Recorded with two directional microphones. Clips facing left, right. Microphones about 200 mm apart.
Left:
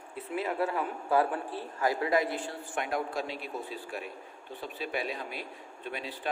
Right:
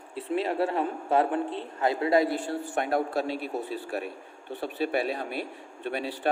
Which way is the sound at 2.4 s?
65° right (ahead or behind).